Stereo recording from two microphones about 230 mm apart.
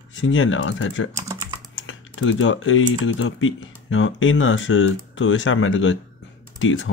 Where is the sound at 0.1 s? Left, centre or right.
Left.